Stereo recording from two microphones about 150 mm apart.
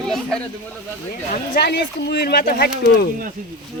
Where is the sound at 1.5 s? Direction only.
90° left.